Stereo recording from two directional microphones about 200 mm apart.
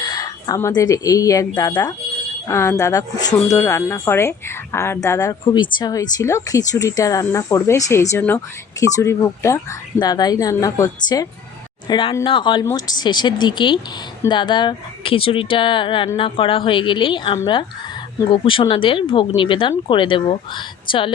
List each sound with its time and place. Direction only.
0.0 s speech: 20° left (ahead or behind)